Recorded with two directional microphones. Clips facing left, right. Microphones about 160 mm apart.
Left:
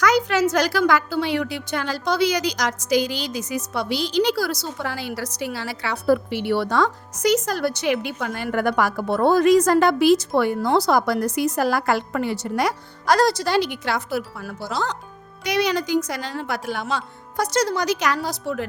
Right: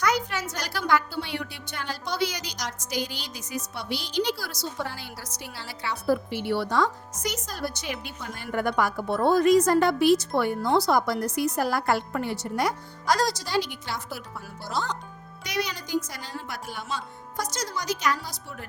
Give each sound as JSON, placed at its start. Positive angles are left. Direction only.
{"t": 0.0, "sound": "a woman's voice", "side_deg": 90}
{"t": 15.4, "sound": "speech", "side_deg": 75}